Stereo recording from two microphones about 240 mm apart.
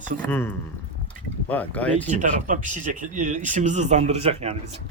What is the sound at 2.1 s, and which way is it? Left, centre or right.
Speech, right.